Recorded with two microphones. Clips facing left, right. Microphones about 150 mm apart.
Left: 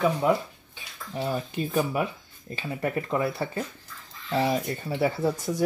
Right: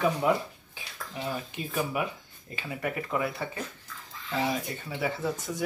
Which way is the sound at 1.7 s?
35° left (ahead or behind).